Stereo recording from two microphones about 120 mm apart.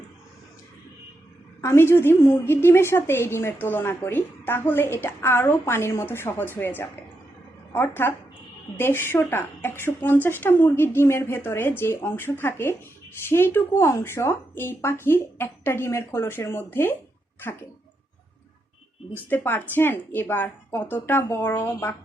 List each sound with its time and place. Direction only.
1.6 s a woman's voice: 20° left (ahead or behind)
19.1 s a woman's voice: 15° left (ahead or behind)